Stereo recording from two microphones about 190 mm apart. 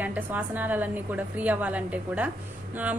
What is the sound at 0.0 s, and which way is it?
Speech, 10° right (ahead or behind).